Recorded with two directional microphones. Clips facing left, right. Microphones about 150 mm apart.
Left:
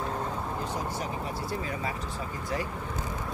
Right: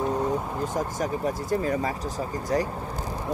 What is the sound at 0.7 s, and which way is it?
Speech, 45° right (ahead or behind).